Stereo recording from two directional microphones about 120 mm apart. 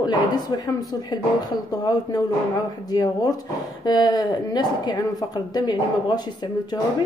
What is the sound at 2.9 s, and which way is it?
Speech, 35° left (ahead or behind).